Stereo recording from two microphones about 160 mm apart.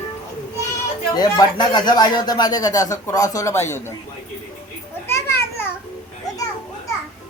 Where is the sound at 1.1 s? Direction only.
25° left (ahead or behind).